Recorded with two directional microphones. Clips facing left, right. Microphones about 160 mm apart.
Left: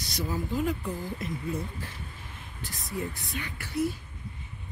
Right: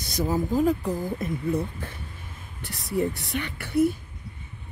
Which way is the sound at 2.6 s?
70° right (ahead or behind).